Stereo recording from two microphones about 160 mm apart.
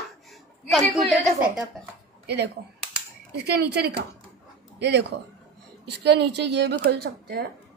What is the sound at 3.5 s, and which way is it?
A woman's voice, 85° right.